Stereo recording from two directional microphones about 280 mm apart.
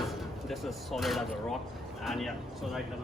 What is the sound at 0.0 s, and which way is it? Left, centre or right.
Speech, centre.